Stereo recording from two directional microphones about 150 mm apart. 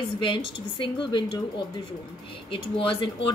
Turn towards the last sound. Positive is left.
turn(degrees=35)  # may be behind; listen again after turning